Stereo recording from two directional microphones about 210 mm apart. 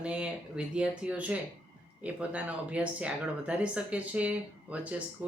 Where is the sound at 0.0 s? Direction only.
5° right (ahead or behind).